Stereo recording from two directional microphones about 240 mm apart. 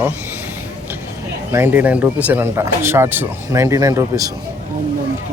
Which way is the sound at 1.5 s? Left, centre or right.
Centre.